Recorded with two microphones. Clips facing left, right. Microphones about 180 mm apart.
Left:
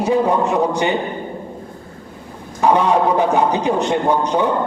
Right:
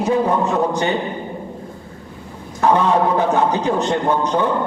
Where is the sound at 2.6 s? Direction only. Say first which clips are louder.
Left 1 dB; 15° left (ahead or behind).